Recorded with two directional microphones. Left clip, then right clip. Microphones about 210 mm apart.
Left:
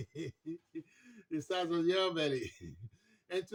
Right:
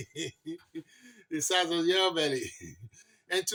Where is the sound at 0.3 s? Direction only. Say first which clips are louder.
Right 4 dB; 10° left (ahead or behind).